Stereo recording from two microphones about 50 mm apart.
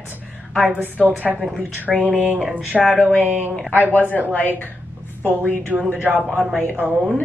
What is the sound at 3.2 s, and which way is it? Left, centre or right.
Speech, right.